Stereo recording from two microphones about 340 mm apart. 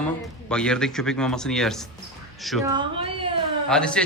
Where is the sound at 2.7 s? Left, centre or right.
Centre.